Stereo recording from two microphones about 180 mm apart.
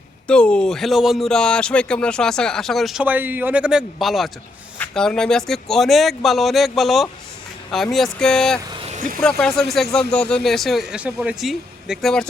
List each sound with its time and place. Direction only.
0.3 s speech: 5° left (ahead or behind)
8.9 s vehicle: 50° right (ahead or behind)
9.4 s speech: centre (ahead or behind)